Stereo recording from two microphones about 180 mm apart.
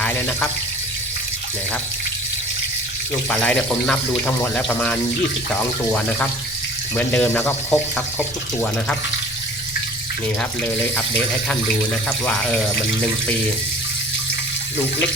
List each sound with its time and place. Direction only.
0.0 s water tap: 10° left (ahead or behind)
3.2 s speech: 5° left (ahead or behind)
10.8 s speech: 10° left (ahead or behind)